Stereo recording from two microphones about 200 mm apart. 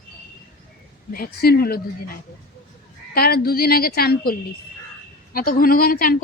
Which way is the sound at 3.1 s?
50° left (ahead or behind).